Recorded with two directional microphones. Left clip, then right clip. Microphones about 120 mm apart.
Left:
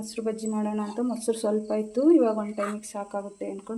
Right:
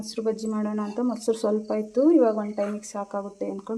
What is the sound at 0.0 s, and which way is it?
Speech, 25° right (ahead or behind).